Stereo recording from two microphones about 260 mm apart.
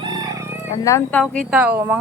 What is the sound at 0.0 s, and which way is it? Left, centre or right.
Crowing, centre.